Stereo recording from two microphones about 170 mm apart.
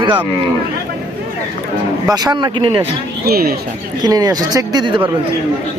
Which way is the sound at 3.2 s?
65° right (ahead or behind).